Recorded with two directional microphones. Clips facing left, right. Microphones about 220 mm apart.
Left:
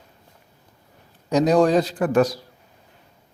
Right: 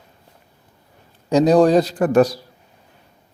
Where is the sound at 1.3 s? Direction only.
30° right (ahead or behind).